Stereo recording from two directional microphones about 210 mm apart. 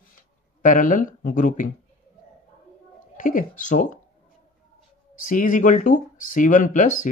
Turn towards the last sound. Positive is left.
turn(degrees=35)  # may be behind; listen again after turning